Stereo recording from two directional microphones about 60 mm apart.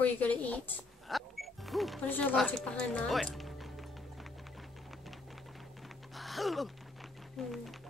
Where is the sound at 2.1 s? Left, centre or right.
Left.